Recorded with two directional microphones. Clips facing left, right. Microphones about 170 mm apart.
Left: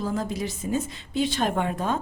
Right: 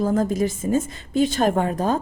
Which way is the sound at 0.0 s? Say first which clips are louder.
Right 8 dB; 50° right (ahead or behind).